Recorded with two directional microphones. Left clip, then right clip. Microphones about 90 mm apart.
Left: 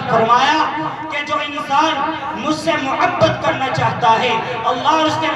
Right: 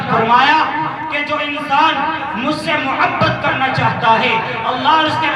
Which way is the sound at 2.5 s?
35° left (ahead or behind).